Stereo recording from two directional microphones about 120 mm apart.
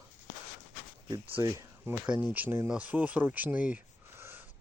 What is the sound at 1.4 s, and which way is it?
Speech, 25° right (ahead or behind).